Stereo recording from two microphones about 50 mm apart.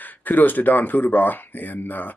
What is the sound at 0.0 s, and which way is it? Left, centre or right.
Speech, left.